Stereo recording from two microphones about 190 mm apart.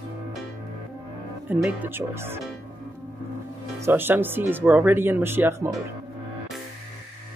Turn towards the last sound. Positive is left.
turn(degrees=-10)  # may be behind; listen again after turning